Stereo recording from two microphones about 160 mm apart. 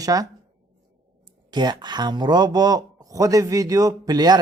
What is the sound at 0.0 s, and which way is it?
Speech, 20° right (ahead or behind).